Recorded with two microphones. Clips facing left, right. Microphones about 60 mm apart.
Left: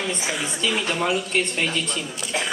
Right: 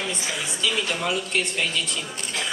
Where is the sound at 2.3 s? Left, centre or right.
Left.